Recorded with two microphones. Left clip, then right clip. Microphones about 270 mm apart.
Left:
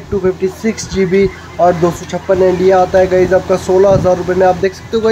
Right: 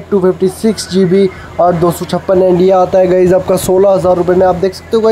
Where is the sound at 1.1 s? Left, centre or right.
Centre.